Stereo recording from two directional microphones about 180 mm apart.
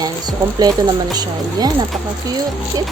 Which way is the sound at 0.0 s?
20° right (ahead or behind).